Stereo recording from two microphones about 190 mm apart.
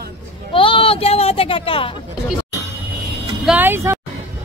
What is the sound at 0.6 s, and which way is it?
Speech, 25° left (ahead or behind).